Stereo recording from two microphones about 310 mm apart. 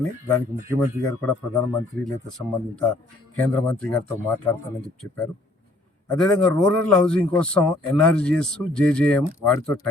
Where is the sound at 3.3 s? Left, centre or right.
Centre.